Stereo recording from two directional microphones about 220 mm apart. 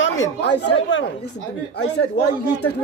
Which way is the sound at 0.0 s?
60° left (ahead or behind).